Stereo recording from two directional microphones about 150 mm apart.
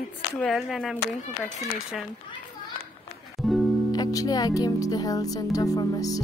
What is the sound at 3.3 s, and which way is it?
Music, centre (ahead or behind).